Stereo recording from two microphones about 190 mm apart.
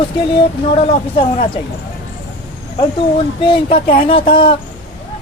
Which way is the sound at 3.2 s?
30° left (ahead or behind).